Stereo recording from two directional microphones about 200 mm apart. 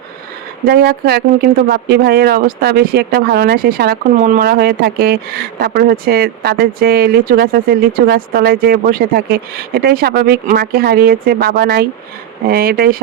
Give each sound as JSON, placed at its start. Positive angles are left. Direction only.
{"t": 0.6, "sound": "speech", "side_deg": -50}